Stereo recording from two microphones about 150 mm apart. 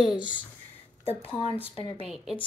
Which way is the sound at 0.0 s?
5° right (ahead or behind).